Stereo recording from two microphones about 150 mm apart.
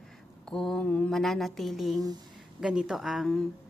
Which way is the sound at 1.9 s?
25° right (ahead or behind).